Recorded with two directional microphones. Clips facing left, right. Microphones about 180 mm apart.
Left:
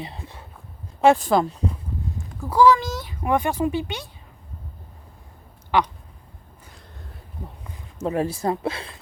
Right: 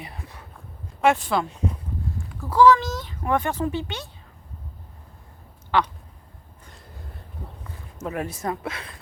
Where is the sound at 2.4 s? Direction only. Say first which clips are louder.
Even; 10° left (ahead or behind).